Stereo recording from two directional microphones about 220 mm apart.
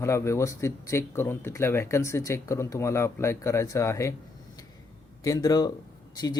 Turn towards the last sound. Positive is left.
turn(degrees=15)  # may be behind; listen again after turning